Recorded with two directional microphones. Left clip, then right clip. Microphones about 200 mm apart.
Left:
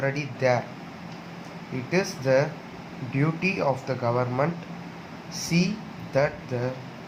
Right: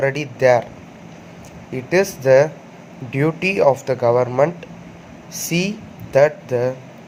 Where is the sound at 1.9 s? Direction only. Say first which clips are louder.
Right 10 dB; 45° right (ahead or behind).